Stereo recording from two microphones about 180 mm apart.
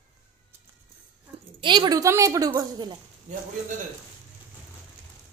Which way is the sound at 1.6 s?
25° right (ahead or behind).